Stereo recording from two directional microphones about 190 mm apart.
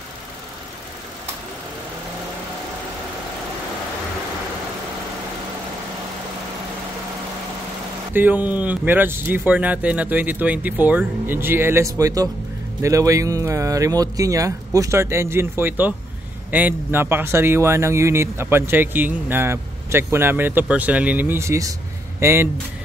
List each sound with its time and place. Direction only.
8.1 s speech: 10° right (ahead or behind)